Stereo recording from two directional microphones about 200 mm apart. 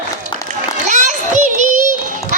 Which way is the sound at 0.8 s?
35° right (ahead or behind).